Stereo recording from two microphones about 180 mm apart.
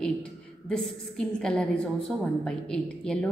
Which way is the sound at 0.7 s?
5° left (ahead or behind).